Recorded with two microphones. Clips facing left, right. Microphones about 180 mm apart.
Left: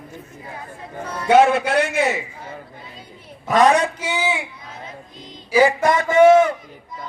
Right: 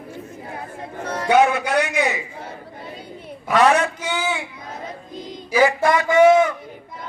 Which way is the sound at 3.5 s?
35° left (ahead or behind).